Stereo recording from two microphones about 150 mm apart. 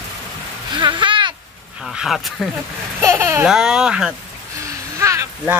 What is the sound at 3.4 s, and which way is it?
Speech, 5° right (ahead or behind).